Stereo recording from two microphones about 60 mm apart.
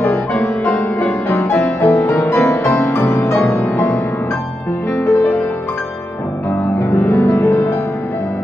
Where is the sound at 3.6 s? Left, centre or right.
Left.